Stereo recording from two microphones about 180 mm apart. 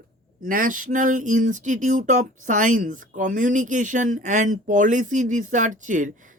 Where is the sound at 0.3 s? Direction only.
50° right (ahead or behind).